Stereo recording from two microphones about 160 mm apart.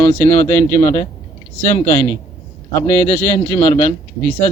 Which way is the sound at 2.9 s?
50° left (ahead or behind).